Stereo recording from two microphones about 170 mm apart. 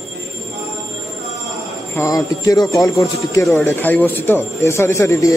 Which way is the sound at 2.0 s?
20° left (ahead or behind).